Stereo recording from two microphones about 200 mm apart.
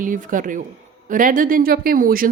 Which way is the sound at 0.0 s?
40° right (ahead or behind).